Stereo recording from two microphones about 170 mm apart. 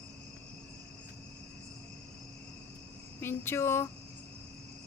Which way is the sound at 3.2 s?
15° left (ahead or behind).